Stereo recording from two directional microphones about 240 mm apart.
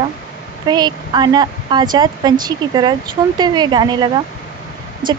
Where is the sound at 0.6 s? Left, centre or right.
Centre.